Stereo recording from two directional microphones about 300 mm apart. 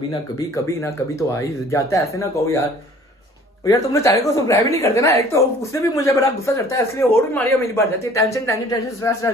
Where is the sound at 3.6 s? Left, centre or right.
Centre.